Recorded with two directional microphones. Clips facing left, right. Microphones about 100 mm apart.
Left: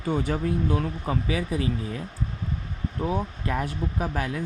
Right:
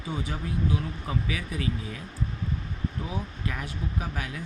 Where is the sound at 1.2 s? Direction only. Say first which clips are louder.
Left 6 dB; 35° left (ahead or behind).